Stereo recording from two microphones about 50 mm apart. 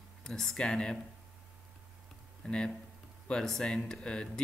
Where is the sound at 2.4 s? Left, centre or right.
Left.